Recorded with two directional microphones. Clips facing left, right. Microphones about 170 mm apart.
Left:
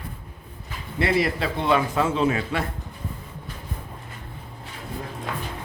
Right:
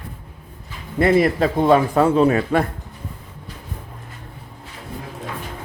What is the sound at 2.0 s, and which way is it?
Speech, 55° right (ahead or behind).